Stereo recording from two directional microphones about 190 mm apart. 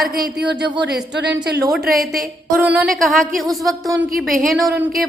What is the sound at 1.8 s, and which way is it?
Speech, 50° right (ahead or behind).